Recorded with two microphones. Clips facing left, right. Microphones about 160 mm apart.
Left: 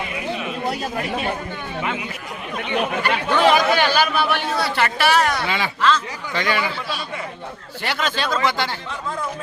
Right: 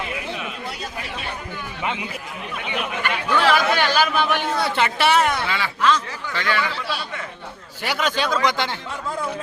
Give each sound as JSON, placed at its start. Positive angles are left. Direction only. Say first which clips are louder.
{"t": 0.7, "sound": "speech", "louder": "left 7 dB", "side_deg": 45}
{"t": 2.7, "sound": "speech", "louder": "left 5 dB", "side_deg": 40}
{"t": 3.4, "sound": "speech", "louder": "left 3 dB", "side_deg": 15}
{"t": 4.3, "sound": "speech", "louder": "even", "side_deg": -15}
{"t": 5.5, "sound": "speech", "louder": "left 1 dB", "side_deg": 20}
{"t": 7.8, "sound": "speech", "louder": "right 1 dB", "side_deg": -10}